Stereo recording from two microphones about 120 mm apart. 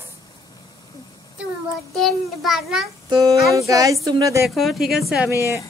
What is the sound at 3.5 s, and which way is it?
Speech, 30° right (ahead or behind).